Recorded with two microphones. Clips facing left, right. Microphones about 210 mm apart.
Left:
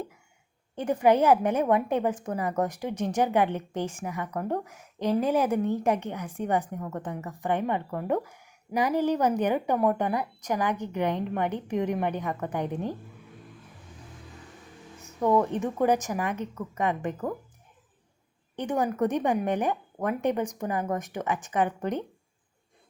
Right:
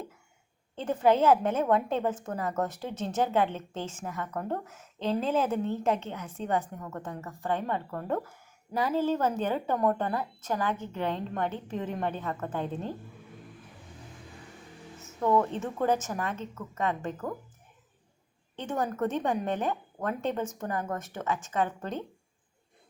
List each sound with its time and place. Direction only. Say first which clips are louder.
0.8 s a woman's voice: left 2 dB; 15° left (ahead or behind)
15.2 s a woman's voice: left 2 dB; 15° left (ahead or behind)
18.5 s a woman's voice: left 4 dB; 15° left (ahead or behind)